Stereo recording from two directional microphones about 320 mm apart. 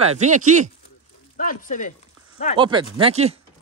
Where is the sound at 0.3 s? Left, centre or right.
Right.